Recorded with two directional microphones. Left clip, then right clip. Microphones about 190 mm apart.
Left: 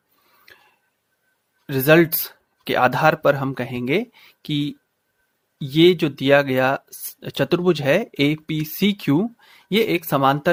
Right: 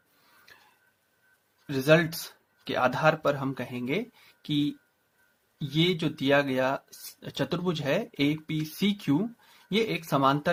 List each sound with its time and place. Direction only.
1.6 s speech: 45° left (ahead or behind)